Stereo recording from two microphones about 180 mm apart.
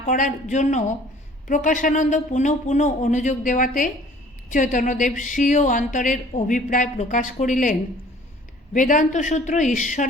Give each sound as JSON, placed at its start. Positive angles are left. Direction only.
{"t": 0.0, "sound": "a woman's voice", "side_deg": 45}